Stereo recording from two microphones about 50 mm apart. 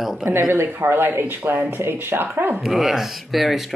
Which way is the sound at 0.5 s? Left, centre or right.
Right.